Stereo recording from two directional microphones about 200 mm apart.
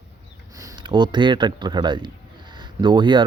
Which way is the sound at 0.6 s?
25° right (ahead or behind).